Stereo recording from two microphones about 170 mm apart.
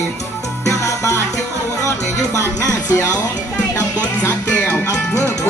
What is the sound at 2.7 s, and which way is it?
Speech, 20° left (ahead or behind).